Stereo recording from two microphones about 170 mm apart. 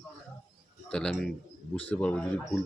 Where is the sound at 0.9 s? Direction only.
5° left (ahead or behind).